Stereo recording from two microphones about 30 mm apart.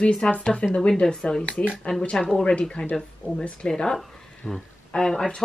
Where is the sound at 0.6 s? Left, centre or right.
Left.